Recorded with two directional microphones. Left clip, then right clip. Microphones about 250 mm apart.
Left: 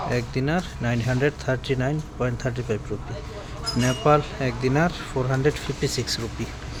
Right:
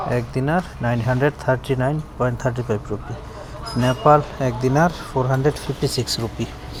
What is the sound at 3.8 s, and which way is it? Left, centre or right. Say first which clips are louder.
Speech: right 5 dB; centre.